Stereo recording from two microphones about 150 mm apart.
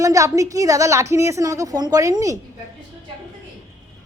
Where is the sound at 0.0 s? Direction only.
20° right (ahead or behind).